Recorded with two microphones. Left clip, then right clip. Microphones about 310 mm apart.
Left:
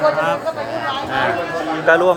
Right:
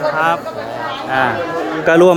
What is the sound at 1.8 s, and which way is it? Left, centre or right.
Speech, right.